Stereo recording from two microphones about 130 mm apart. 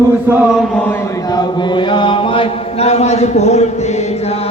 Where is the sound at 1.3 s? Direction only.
40° left (ahead or behind); by 3.6 s 60° left (ahead or behind).